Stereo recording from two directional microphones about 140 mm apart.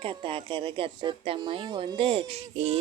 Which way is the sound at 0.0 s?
40° right (ahead or behind).